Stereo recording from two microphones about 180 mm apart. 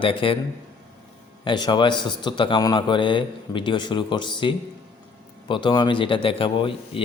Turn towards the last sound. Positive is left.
turn(degrees=30)  # may be behind; listen again after turning